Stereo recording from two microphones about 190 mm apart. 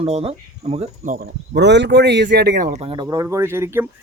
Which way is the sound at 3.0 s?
15° right (ahead or behind).